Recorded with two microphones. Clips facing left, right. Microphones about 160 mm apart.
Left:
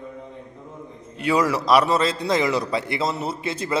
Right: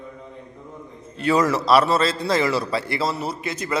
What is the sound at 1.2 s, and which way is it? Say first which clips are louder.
A man's voice: right 1 dB; 10° left (ahead or behind).